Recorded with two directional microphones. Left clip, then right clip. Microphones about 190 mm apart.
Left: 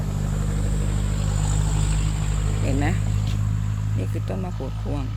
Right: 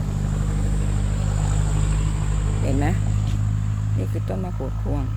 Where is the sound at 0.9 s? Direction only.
55° left (ahead or behind).